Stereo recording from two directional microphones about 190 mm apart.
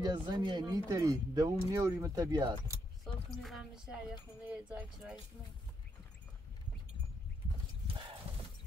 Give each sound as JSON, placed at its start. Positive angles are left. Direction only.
{"t": 0.0, "sound": "speech", "side_deg": -20}
{"t": 3.4, "sound": "speech", "side_deg": 0}